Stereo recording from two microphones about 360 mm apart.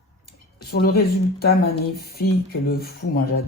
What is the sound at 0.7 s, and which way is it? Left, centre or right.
Speech, left.